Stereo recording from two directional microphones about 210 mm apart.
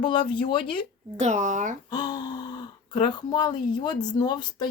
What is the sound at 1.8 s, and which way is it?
A child's voice, 20° left (ahead or behind).